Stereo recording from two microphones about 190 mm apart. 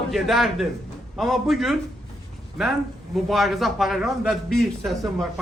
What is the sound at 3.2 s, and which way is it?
A man's voice, centre (ahead or behind).